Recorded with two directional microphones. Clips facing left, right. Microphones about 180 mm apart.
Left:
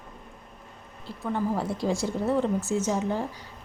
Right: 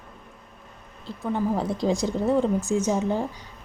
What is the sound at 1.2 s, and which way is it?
A woman's voice, 15° right (ahead or behind).